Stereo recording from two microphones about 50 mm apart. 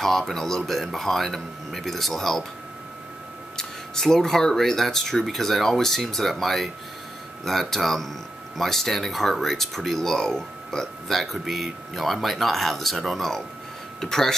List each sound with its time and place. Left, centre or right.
0.0 s speech: centre
3.5 s speech: centre